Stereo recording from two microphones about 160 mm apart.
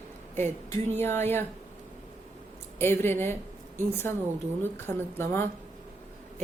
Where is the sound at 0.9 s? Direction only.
15° left (ahead or behind).